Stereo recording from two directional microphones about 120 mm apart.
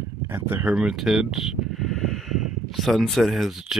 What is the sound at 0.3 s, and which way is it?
Speech, 15° right (ahead or behind).